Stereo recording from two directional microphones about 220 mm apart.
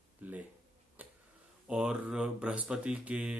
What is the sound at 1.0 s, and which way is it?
Tick-tock, 5° right (ahead or behind).